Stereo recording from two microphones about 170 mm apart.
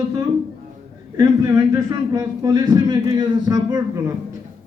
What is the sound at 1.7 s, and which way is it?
A man's voice, 20° right (ahead or behind).